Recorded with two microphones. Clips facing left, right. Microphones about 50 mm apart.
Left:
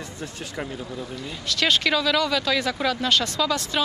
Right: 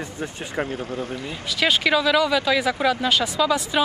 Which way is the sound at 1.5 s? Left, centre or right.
Centre.